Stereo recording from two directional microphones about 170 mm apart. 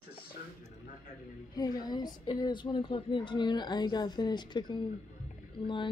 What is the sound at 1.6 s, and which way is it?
A woman's voice, 25° left (ahead or behind).